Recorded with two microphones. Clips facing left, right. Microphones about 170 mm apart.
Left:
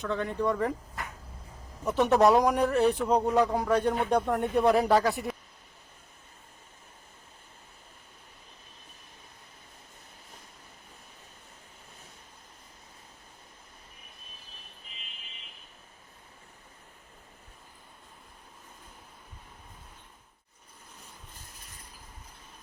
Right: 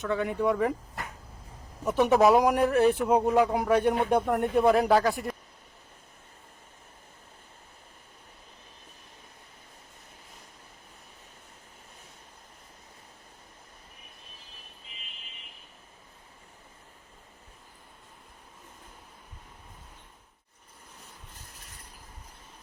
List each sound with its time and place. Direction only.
0.0 s speech: 5° right (ahead or behind)
1.9 s speech: centre (ahead or behind)